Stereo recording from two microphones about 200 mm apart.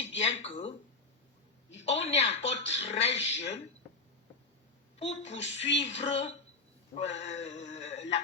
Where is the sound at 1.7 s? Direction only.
35° left (ahead or behind).